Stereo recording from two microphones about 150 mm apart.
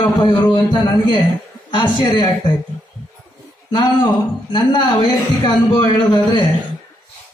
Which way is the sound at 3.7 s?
30° left (ahead or behind).